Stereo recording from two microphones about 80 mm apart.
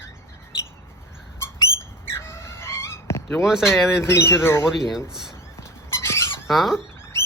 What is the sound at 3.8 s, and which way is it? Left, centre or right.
Speech, left.